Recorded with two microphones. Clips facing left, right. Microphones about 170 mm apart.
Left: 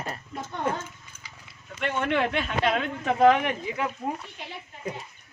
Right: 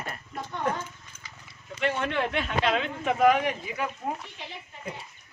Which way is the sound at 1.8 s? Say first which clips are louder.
Left 2 dB; 55° left (ahead or behind).